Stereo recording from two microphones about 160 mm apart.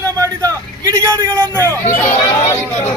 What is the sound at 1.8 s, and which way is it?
Chatter, 45° left (ahead or behind).